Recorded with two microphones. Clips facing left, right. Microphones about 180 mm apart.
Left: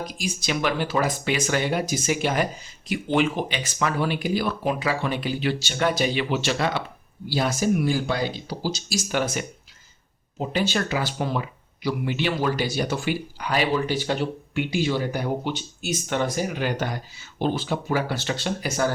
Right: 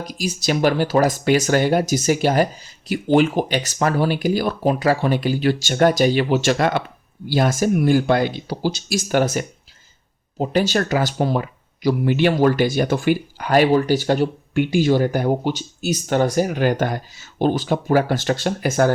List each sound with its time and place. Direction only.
0.0 s speech: 40° right (ahead or behind)